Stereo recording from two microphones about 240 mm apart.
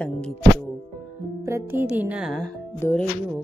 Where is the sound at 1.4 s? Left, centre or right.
Centre.